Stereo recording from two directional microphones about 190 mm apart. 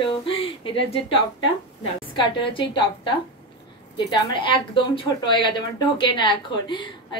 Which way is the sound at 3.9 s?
25° left (ahead or behind).